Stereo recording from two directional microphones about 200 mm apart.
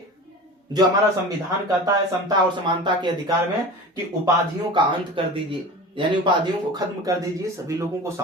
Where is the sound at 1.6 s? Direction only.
15° right (ahead or behind).